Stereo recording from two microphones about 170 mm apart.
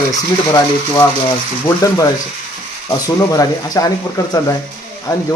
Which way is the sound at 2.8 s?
20° left (ahead or behind).